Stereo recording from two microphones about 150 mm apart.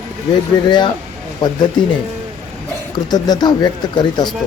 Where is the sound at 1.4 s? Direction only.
30° left (ahead or behind).